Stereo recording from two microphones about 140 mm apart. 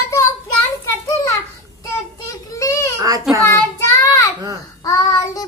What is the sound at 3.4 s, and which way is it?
Child singing, 20° left (ahead or behind).